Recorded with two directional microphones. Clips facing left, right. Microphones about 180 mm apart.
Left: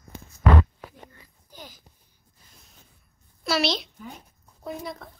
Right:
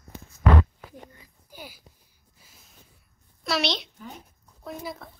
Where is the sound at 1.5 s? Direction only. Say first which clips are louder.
Right 2 dB; 10° right (ahead or behind).